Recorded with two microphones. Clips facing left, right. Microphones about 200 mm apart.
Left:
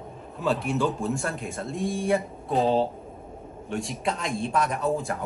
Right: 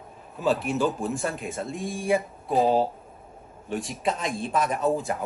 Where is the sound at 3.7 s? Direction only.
Centre (ahead or behind).